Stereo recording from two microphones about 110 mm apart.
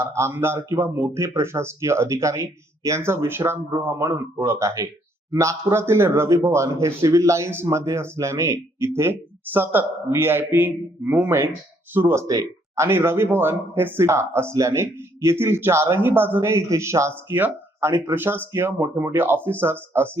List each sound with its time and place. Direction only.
0.0 s speech: 25° right (ahead or behind)